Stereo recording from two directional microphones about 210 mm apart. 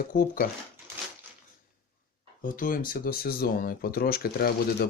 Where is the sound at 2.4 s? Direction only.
40° left (ahead or behind).